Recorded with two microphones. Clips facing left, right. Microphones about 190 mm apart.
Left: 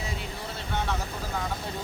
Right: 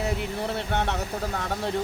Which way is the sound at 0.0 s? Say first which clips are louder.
Right 8 dB; 65° right (ahead or behind).